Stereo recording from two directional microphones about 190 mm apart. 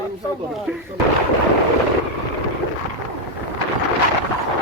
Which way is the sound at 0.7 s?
5° right (ahead or behind).